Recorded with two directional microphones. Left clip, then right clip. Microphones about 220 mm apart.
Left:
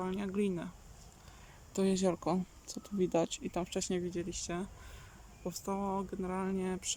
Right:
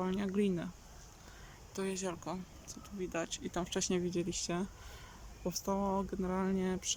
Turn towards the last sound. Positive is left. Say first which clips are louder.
# right 1 dB
turn(degrees=0)  # may be behind; listen again after turning